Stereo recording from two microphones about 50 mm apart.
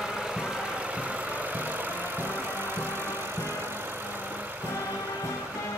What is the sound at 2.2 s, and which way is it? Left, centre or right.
Music, right.